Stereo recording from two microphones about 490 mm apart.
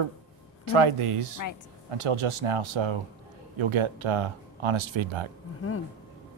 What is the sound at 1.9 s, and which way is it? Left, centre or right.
Speech, right.